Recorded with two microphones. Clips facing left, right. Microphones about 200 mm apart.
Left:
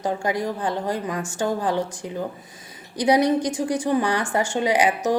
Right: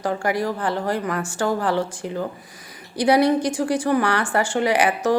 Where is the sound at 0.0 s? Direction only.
20° left (ahead or behind).